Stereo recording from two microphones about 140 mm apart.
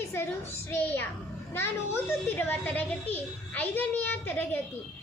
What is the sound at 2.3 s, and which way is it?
A child's voice, 15° left (ahead or behind).